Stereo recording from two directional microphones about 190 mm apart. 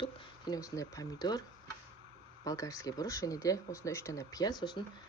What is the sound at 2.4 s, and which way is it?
Speech, 15° left (ahead or behind).